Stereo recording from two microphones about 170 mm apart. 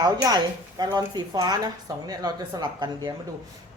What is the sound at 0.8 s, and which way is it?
Speech, 25° right (ahead or behind).